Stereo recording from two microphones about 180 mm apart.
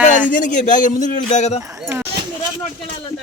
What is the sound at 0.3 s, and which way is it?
A man's voice, 45° left (ahead or behind).